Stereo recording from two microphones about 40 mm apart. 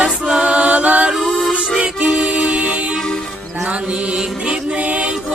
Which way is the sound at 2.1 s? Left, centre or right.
Right.